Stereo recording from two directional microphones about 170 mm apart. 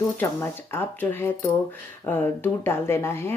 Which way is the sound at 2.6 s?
15° left (ahead or behind).